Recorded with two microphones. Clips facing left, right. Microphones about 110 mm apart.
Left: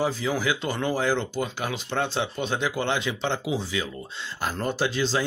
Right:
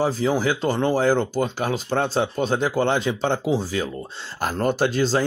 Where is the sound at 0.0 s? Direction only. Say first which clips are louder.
Right 5 dB; 35° right (ahead or behind).